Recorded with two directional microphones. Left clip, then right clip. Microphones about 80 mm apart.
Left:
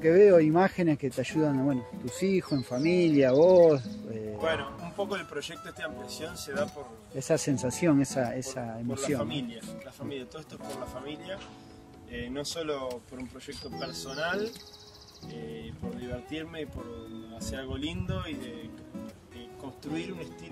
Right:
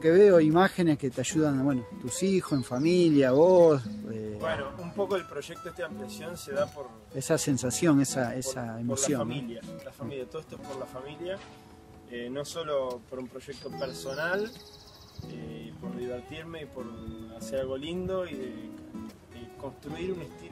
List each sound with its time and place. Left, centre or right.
0.0 s speech: centre
2.1 s speech: centre
4.4 s speech: centre
6.0 s speech: right
12.1 s speech: right
12.8 s speech: centre
13.7 s speech: right
16.3 s speech: right
17.4 s speech: right
19.8 s speech: right